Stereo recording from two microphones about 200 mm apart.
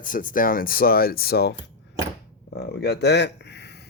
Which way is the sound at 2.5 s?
55° left (ahead or behind).